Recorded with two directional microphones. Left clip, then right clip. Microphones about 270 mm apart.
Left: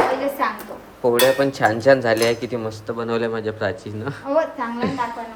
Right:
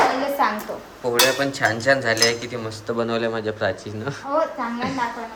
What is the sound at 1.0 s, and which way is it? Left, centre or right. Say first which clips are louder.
Cutlery: left 3 dB; centre.